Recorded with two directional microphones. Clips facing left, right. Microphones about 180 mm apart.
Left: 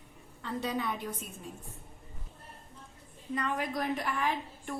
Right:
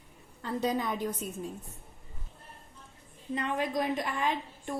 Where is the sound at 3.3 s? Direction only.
25° right (ahead or behind).